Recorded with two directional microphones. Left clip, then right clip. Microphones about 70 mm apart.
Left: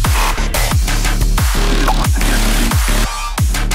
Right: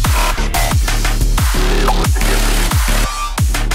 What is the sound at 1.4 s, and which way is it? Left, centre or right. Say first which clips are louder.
Music: right 1 dB; centre.